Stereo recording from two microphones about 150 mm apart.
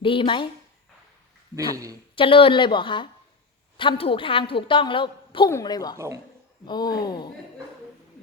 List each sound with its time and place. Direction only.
0.0 s a woman's voice: 35° left (ahead or behind)
1.5 s speech: 20° right (ahead or behind)
2.1 s a woman's voice: 35° left (ahead or behind)